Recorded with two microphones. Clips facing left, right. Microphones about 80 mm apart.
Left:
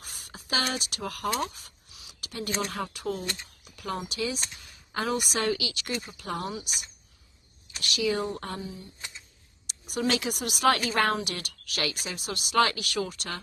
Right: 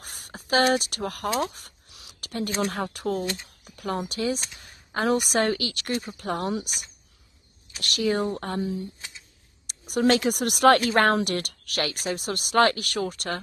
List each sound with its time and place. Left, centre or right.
0.0 s a sound: right
2.6 s speech: right
3.6 s a sound: right
4.1 s speech: right
8.5 s speech: right
9.7 s speech: right